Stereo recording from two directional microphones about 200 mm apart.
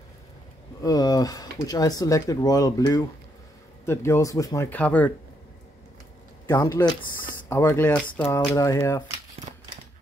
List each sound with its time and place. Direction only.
0.8 s speech: 20° left (ahead or behind)
6.4 s speech: 20° left (ahead or behind)